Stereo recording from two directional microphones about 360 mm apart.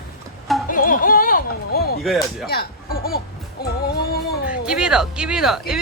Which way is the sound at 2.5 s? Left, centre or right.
Left.